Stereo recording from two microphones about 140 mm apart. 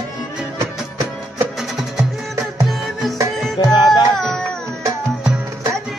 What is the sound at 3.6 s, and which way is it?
Music, 30° left (ahead or behind).